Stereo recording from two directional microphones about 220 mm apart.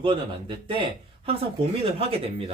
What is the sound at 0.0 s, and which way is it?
Speech, 25° right (ahead or behind).